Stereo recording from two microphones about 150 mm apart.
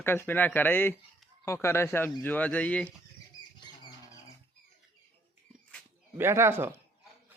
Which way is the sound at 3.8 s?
25° left (ahead or behind).